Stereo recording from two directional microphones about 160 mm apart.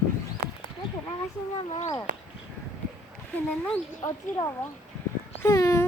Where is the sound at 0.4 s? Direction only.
65° right (ahead or behind).